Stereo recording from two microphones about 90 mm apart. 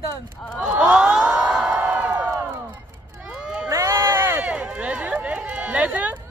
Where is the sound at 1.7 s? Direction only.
20° right (ahead or behind).